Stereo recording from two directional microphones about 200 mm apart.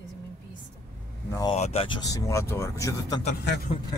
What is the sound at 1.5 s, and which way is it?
Speech, 30° left (ahead or behind).